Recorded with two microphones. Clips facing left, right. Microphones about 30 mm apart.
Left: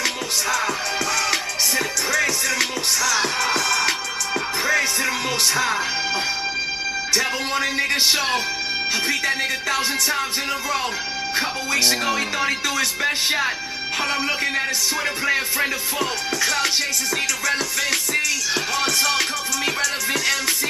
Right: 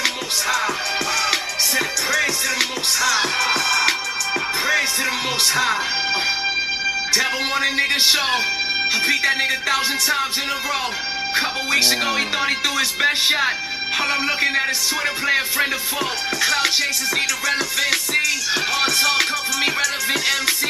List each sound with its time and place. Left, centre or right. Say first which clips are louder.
0.0 s music: right 1 dB; centre
8.9 s speech: right 3 dB; centre
11.8 s speech: right 1 dB; centre
18.5 s music: right 2 dB; centre